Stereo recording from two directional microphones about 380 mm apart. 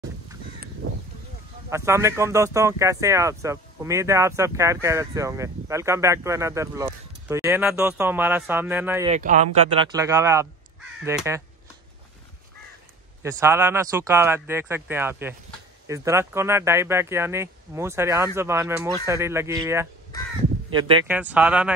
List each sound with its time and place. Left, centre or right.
0.8 s a sound: right
1.7 s speech: centre
9.1 s speech: centre
13.2 s speech: centre